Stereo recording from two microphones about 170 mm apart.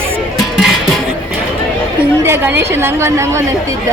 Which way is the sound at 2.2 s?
15° right (ahead or behind).